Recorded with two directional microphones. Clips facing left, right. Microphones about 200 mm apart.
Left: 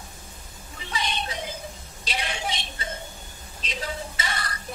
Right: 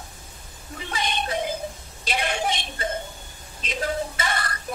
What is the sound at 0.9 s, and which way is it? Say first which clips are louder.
Music: right 3 dB; 55° right (ahead or behind).